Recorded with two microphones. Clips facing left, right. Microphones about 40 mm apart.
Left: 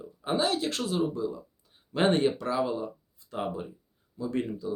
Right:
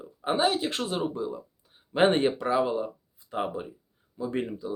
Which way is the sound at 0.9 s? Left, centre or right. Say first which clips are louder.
Left 1 dB; right.